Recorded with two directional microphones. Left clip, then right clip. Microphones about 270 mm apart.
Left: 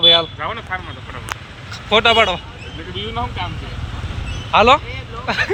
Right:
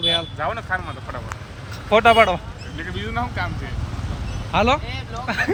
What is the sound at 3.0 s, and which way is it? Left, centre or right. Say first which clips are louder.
Speech: left 2 dB; centre.